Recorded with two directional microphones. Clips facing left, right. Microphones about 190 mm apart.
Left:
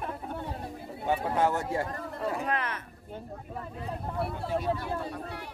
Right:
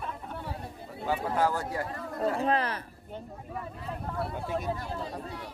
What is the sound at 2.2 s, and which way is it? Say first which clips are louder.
Speech: right 4 dB; 30° right (ahead or behind).